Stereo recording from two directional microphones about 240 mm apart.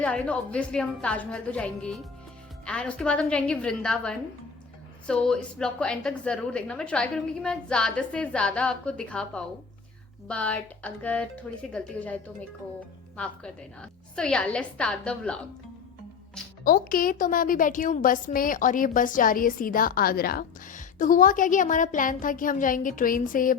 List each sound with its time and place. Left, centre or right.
0.0 s a woman's voice: centre
16.6 s a woman's voice: left